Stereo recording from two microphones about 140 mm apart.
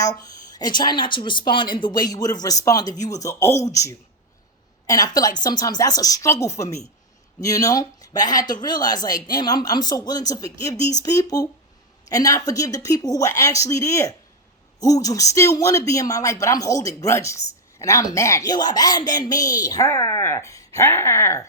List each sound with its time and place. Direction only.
0.0 s speech: 25° left (ahead or behind)